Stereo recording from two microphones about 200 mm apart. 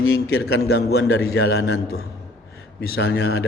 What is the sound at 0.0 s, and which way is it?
Speech, 90° left.